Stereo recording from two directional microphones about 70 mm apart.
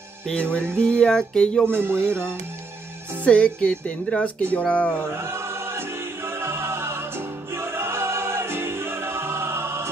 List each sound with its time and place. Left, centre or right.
0.3 s music: centre
1.7 s speech: right
3.3 s speech: centre
5.1 s choir: right